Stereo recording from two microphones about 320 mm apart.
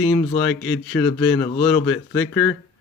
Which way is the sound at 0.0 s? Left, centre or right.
Centre.